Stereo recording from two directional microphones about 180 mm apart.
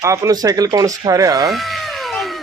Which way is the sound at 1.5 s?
Centre (ahead or behind).